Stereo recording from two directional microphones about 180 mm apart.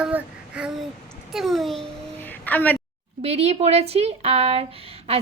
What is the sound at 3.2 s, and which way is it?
A woman's voice, 35° right (ahead or behind).